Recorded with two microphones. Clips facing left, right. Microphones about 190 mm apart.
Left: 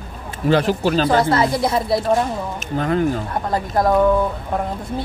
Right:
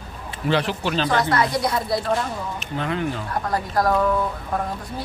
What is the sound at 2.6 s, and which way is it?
Speech, 45° left (ahead or behind).